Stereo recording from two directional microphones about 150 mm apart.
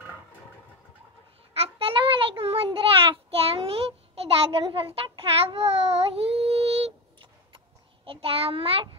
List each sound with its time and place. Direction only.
1.5 s child singing: 40° right (ahead or behind)